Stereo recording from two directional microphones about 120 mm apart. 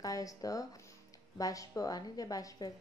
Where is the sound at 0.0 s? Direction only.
30° left (ahead or behind).